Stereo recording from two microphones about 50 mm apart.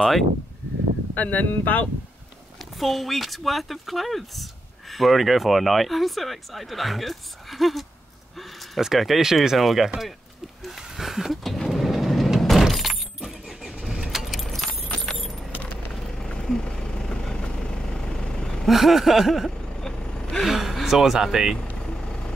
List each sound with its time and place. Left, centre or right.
0.0 s speech: centre
1.1 s speech: left
2.8 s speech: centre
10.6 s a sound: centre
11.5 s vehicle: centre
12.6 s car: centre
15.0 s keys jangling: centre
15.9 s vehicle: centre
18.7 s speech: centre
19.9 s gasp: centre
20.4 s speech: centre